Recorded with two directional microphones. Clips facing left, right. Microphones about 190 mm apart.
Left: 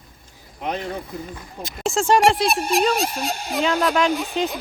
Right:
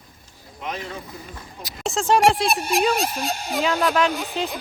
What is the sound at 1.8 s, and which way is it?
Speech, centre (ahead or behind).